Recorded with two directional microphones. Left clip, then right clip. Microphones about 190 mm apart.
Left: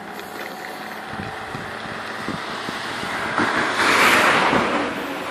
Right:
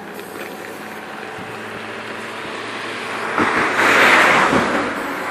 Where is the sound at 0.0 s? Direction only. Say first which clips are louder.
Right 1 dB; 40° left (ahead or behind).